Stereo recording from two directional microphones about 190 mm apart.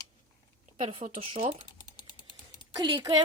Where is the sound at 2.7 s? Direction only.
20° right (ahead or behind).